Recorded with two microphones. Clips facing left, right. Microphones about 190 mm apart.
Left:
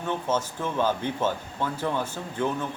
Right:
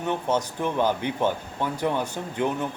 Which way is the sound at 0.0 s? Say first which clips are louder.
Right 2 dB; 15° right (ahead or behind).